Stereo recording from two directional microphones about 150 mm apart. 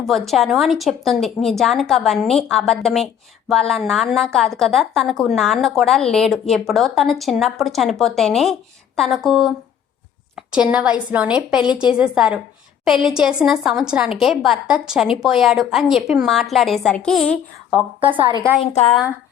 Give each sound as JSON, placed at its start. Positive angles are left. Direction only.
{"t": 0.0, "sound": "a woman's voice", "side_deg": 0}
{"t": 18.0, "sound": "a woman's voice", "side_deg": -35}
{"t": 18.6, "sound": "a woman's voice", "side_deg": 40}